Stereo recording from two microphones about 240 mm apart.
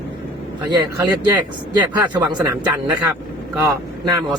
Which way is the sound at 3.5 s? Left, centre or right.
Centre.